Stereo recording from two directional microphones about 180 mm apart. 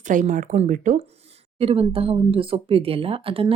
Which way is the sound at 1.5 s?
30° right (ahead or behind).